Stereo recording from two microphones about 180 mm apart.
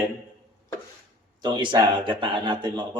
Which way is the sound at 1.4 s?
25° right (ahead or behind).